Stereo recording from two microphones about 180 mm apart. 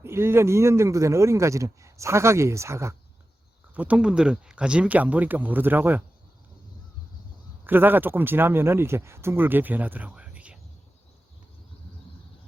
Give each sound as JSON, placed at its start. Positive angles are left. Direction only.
{"t": 0.0, "sound": "speech", "side_deg": -15}
{"t": 7.6, "sound": "speech", "side_deg": -10}